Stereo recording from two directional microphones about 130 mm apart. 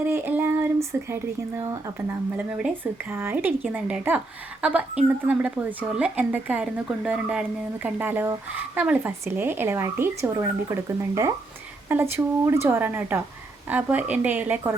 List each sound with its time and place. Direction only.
0.0 s speech: 15° right (ahead or behind)
2.5 s speech: 5° right (ahead or behind)